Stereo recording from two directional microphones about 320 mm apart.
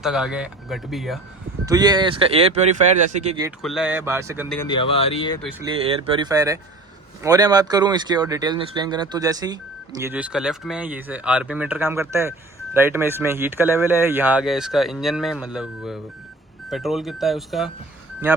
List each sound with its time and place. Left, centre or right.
0.0 s speech: centre
1.6 s speech: centre
3.6 s speech: centre
4.5 s speech: centre
5.6 s speech: centre